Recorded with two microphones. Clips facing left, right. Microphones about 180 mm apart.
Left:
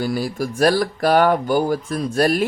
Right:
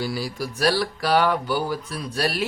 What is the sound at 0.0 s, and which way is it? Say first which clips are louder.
Speech: left 5 dB; 50° left (ahead or behind).